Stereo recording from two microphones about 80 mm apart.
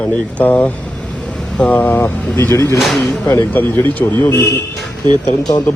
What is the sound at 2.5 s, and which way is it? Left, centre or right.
Speech, left.